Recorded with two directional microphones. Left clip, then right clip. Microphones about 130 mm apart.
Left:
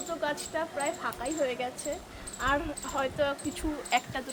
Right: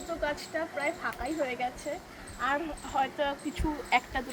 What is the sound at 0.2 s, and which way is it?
Speech, centre (ahead or behind).